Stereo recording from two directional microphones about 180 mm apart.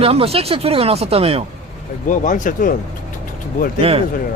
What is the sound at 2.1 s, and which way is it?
Speech, 45° left (ahead or behind).